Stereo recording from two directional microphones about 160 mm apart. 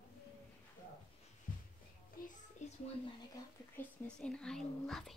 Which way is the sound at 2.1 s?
65° left (ahead or behind).